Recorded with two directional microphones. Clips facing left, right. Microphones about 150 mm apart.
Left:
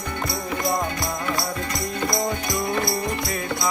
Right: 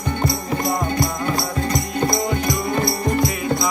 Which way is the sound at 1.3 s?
35° right (ahead or behind).